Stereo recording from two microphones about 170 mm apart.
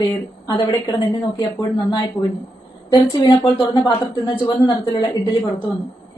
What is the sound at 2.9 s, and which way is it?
A woman's voice, 25° left (ahead or behind).